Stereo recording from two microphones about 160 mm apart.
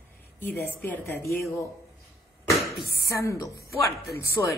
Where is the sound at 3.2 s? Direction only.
20° left (ahead or behind).